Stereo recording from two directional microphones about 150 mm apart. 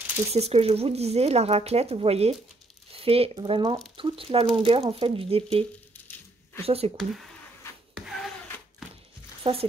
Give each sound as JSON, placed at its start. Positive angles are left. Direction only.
{"t": 0.3, "sound": "speech", "side_deg": -40}
{"t": 7.9, "sound": "a sound", "side_deg": 0}
{"t": 9.4, "sound": "speech", "side_deg": -40}